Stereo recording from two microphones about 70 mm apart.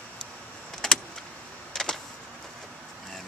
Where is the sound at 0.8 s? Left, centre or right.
Centre.